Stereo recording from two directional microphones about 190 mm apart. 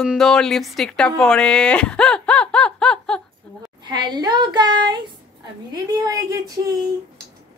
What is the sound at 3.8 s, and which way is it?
Speech, 25° right (ahead or behind).